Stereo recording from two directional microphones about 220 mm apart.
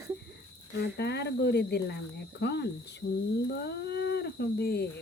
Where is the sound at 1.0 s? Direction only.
50° left (ahead or behind).